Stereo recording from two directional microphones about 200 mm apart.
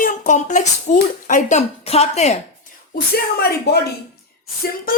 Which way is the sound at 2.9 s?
55° left (ahead or behind).